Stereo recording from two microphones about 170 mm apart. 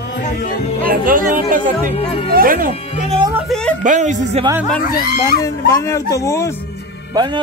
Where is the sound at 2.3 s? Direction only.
55° right (ahead or behind).